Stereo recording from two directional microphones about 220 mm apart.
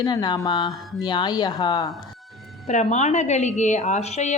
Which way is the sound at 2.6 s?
30° left (ahead or behind).